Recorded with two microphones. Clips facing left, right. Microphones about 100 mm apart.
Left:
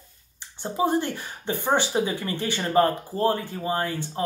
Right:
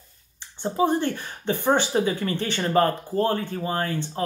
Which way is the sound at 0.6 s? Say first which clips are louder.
Right 1 dB; 15° left (ahead or behind).